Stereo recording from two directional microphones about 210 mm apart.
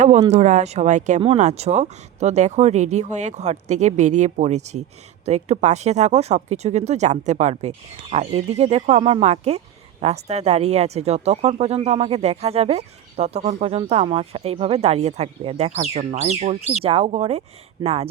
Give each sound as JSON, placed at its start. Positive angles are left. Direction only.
{"t": 0.3, "sound": "speech", "side_deg": -35}